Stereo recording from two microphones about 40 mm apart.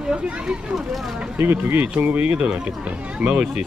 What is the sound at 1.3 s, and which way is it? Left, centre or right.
Speech, right.